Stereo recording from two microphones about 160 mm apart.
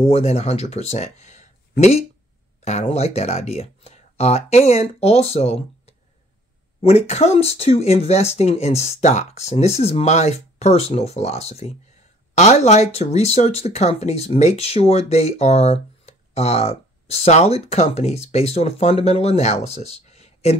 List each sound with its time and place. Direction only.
0.0 s speech: 40° left (ahead or behind)